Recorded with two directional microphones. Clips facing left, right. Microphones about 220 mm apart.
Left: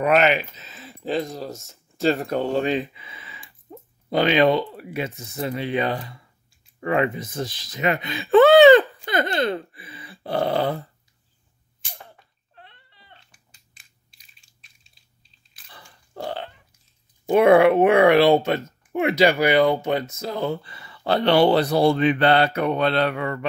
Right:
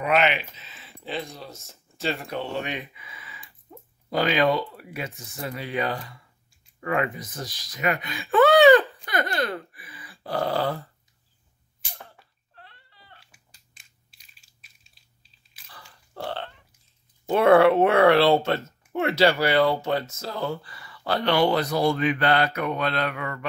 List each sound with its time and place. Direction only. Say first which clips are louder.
0.0 s speech: left 4 dB; 45° left (ahead or behind); by 10.8 s 20° left (ahead or behind)
12.5 s dog: left 2 dB; 20° left (ahead or behind)
13.2 s crushing: even; centre (ahead or behind)
16.1 s burping: left 2 dB; 10° left (ahead or behind)
17.3 s speech: left 2 dB; 15° left (ahead or behind)